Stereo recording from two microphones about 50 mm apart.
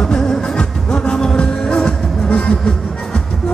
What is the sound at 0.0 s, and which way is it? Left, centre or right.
Music, centre.